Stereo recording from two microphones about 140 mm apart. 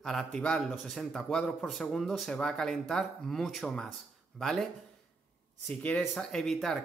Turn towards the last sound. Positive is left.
turn(degrees=0)  # may be behind; listen again after turning